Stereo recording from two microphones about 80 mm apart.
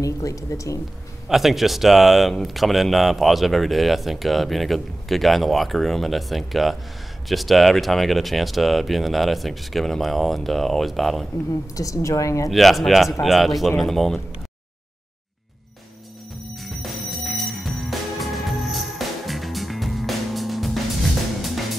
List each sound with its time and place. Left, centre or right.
0.0 s a woman's voice: left
1.3 s speech: centre
11.7 s a woman's voice: left
12.4 s speech: centre
16.6 s music: centre